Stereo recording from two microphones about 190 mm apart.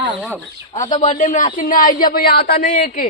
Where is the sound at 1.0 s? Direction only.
40° left (ahead or behind).